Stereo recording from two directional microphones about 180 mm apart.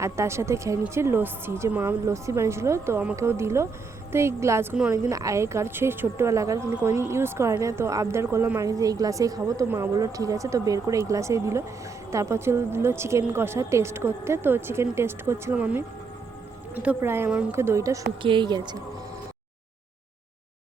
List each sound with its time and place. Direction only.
0.0 s a woman's voice: 15° right (ahead or behind)